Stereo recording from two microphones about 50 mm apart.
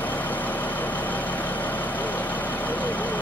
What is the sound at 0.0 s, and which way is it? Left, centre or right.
Vehicle, left.